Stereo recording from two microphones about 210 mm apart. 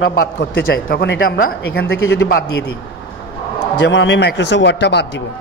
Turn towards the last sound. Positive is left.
turn(degrees=55)  # may be behind; listen again after turning